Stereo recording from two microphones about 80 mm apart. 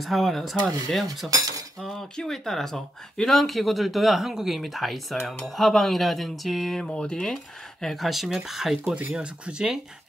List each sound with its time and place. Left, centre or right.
0.0 s speech: centre
1.3 s cutlery: right
1.8 s speech: centre